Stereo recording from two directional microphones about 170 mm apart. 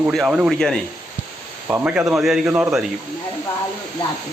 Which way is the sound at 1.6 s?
10° right (ahead or behind).